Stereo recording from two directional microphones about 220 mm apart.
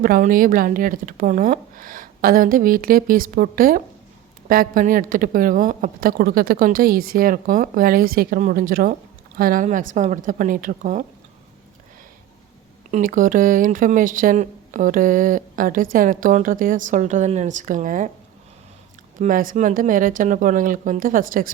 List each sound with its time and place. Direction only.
0.0 s speech: 40° right (ahead or behind)
12.9 s speech: 40° right (ahead or behind)
19.2 s speech: 40° right (ahead or behind)